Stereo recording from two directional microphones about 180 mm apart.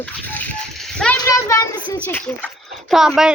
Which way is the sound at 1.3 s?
15° left (ahead or behind).